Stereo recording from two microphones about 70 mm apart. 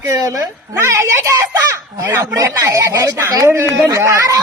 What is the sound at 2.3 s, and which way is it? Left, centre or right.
Speech, right.